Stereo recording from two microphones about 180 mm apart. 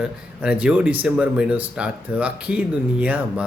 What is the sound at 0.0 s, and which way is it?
A man's voice, 5° right (ahead or behind).